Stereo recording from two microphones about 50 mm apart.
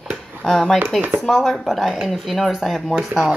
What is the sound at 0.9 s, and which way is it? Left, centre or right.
Speech, right.